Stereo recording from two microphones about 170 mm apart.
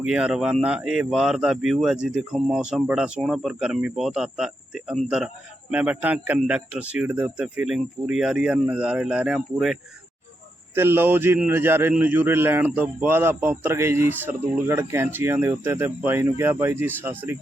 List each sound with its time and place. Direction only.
0.0 s a man's voice: 5° right (ahead or behind)
10.8 s a man's voice: 15° right (ahead or behind)